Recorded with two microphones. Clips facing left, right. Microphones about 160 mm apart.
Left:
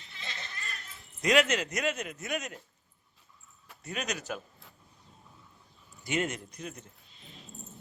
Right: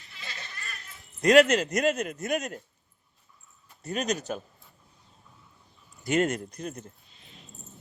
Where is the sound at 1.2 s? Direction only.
40° right (ahead or behind).